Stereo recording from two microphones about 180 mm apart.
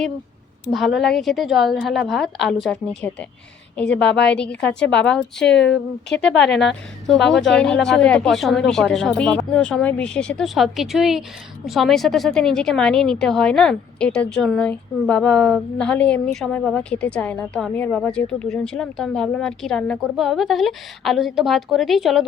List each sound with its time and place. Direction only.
0.7 s a woman's voice: centre (ahead or behind)
4.1 s a woman's voice: 70° left (ahead or behind)
4.4 s a woman's voice: 5° left (ahead or behind)